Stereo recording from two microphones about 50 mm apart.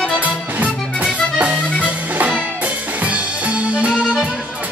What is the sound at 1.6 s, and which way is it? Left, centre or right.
Accordion, left.